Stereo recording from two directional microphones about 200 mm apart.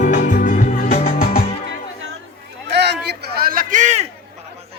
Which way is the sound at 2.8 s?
55° right (ahead or behind).